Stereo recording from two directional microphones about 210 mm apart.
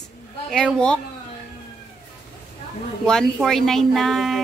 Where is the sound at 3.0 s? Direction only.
Centre (ahead or behind).